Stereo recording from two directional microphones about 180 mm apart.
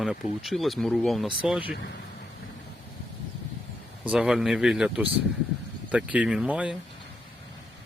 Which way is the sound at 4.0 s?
5° right (ahead or behind).